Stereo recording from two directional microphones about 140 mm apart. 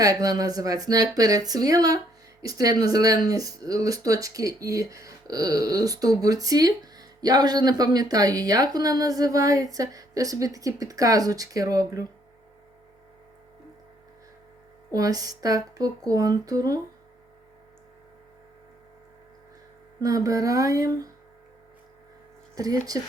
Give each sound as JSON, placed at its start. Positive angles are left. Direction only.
{"t": 0.0, "sound": "speech", "side_deg": -25}
{"t": 14.9, "sound": "speech", "side_deg": -25}
{"t": 20.0, "sound": "speech", "side_deg": -25}
{"t": 22.5, "sound": "speech", "side_deg": -25}